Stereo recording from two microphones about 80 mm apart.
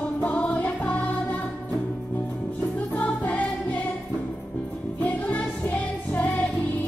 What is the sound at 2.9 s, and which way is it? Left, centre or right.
Music, centre.